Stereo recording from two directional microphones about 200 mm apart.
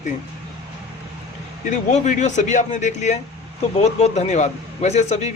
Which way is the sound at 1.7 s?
35° left (ahead or behind).